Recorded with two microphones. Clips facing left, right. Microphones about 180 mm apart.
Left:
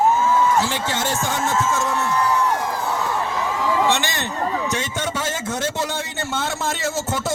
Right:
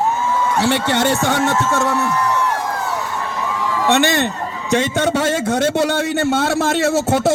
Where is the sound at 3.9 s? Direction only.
60° right (ahead or behind).